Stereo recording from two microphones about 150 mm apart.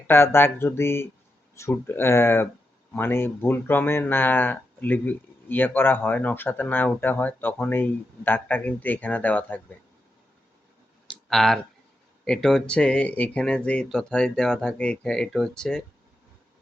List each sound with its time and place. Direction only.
0.1 s speech: 15° left (ahead or behind)
11.1 s clicking: centre (ahead or behind)
12.2 s speech: 5° left (ahead or behind)